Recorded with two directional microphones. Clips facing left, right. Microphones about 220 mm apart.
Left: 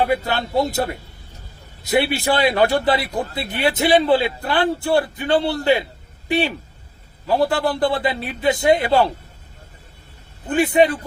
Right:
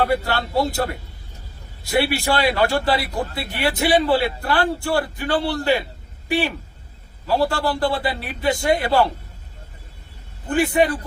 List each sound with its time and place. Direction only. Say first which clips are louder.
0.0 s a man's voice: left 1 dB; 20° left (ahead or behind)
10.5 s a man's voice: left 2 dB; 20° left (ahead or behind)